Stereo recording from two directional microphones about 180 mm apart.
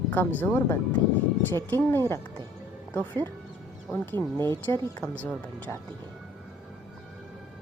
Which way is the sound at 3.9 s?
10° left (ahead or behind).